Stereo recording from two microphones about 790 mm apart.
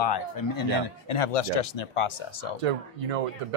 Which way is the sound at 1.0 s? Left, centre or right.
Left.